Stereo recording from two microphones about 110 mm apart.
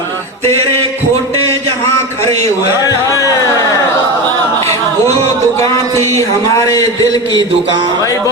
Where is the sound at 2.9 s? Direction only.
30° left (ahead or behind).